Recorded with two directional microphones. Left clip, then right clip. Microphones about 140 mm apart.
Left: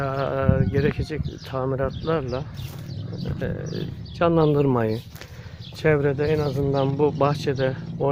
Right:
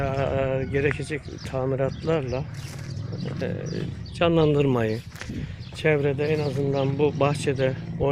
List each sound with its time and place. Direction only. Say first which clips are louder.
0.0 s speech: left 1 dB; 5° left (ahead or behind)
3.6 s speech: even; 15° right (ahead or behind)
4.2 s speech: left 1 dB; 10° left (ahead or behind)
6.6 s speech: left 2 dB; 40° left (ahead or behind)
6.9 s speech: left 2 dB; 15° left (ahead or behind); by 7.8 s centre (ahead or behind)